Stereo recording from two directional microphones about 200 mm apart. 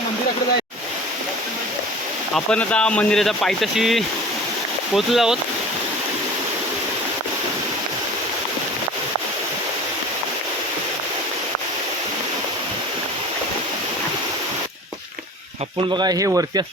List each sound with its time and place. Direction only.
2.3 s speech: 5° left (ahead or behind)
16.0 s speech: 20° right (ahead or behind)